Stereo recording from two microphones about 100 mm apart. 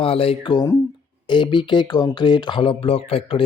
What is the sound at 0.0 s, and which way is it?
Speech, 70° left (ahead or behind).